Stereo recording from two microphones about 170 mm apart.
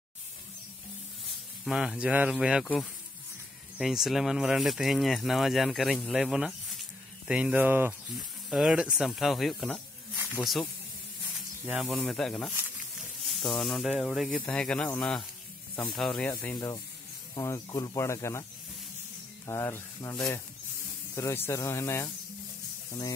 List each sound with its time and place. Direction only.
1.6 s speech: 5° right (ahead or behind)
3.7 s speech: centre (ahead or behind)
13.6 s speech: centre (ahead or behind)
16.5 s speech: 25° left (ahead or behind)
19.4 s speech: 15° left (ahead or behind)